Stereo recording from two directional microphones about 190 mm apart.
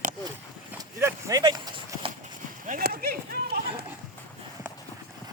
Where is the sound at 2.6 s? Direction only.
50° right (ahead or behind).